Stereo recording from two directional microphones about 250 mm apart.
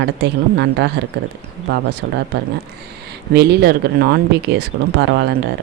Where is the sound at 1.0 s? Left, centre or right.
Right.